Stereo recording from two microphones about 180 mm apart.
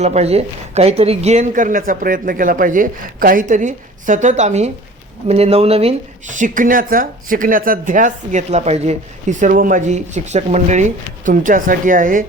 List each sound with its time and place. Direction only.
0.0 s a woman's voice: 35° right (ahead or behind)
9.4 s a woman's voice: 50° right (ahead or behind)